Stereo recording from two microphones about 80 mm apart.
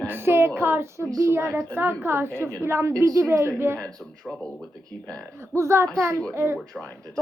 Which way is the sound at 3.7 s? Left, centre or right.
Centre.